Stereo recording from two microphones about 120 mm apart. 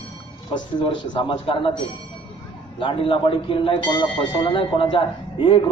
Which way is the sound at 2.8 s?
45° left (ahead or behind).